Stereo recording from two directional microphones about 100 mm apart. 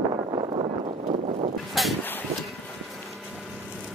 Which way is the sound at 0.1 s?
60° right (ahead or behind).